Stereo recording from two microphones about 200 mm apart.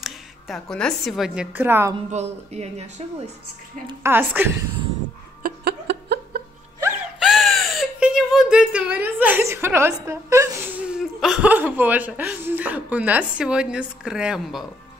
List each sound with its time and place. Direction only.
0.0 s a woman's voice: centre (ahead or behind)
2.0 s speech: 35° right (ahead or behind)
4.0 s a woman's voice: 10° right (ahead or behind)
5.4 s a sound: 55° right (ahead or behind)
7.2 s gasp: centre (ahead or behind)